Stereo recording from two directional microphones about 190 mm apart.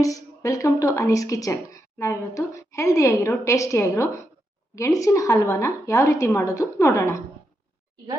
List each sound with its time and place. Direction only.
0.0 s speech: 15° left (ahead or behind)